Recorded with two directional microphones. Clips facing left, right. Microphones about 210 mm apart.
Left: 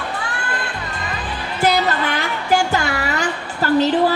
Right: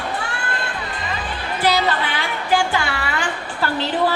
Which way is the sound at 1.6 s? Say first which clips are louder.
Left 2 dB; 45° left (ahead or behind).